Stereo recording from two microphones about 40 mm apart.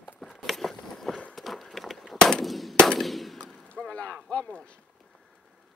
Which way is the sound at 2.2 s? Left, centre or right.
Centre.